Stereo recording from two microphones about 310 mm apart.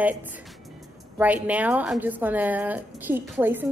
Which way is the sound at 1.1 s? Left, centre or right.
Centre.